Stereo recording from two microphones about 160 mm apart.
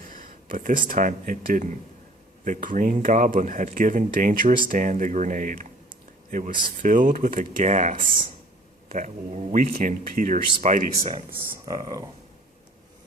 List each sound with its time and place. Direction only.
0.0 s speech: 60° right (ahead or behind)
11.6 s speech: 25° right (ahead or behind)